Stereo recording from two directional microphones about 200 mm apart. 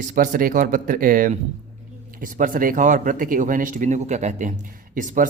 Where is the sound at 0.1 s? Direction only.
45° right (ahead or behind).